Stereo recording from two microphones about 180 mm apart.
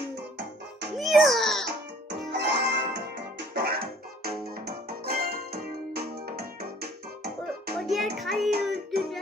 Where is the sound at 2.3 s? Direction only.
70° right (ahead or behind).